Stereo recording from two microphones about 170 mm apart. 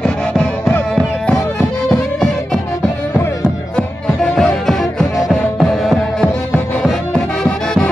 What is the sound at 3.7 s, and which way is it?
Music, centre (ahead or behind).